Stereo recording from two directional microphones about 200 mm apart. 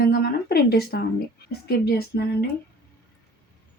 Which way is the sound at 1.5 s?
55° left (ahead or behind).